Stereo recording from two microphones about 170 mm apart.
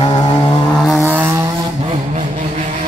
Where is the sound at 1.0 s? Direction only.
15° right (ahead or behind).